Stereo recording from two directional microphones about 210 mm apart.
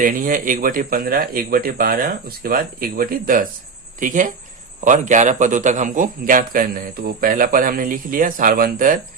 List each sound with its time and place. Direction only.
0.0 s a man's voice: 40° right (ahead or behind)